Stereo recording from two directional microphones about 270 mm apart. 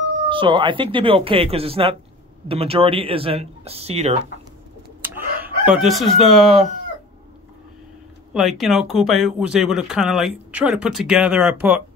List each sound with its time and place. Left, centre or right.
0.3 s speech: centre
5.4 s chicken: centre
8.3 s speech: centre